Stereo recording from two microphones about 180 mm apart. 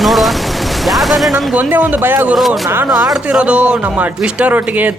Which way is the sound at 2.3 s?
Centre (ahead or behind).